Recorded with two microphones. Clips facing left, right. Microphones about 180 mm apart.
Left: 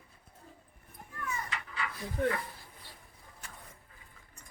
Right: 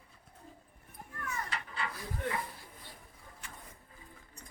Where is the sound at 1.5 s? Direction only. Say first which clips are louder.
Even; 30° right (ahead or behind).